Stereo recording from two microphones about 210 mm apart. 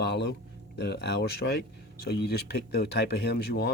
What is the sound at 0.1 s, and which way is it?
Speech, 55° left (ahead or behind).